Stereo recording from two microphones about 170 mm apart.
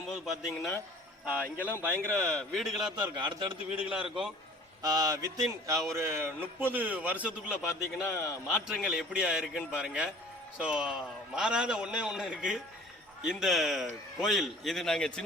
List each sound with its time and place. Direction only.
0.1 s a man's voice: centre (ahead or behind)
2.3 s a man's voice: centre (ahead or behind)
2.9 s speech: 25° right (ahead or behind)
3.8 s a man's voice: 5° right (ahead or behind)
4.8 s a man's voice: 25° right (ahead or behind)
7.5 s a man's voice: 15° left (ahead or behind)
8.5 s a man's voice: 5° right (ahead or behind)